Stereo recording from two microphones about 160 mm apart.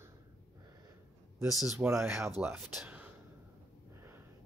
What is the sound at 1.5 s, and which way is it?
Speech, 5° right (ahead or behind).